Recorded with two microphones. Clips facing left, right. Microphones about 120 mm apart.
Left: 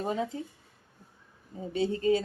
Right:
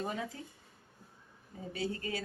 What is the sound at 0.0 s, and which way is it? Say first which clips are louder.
Speech: left 7 dB; 25° left (ahead or behind).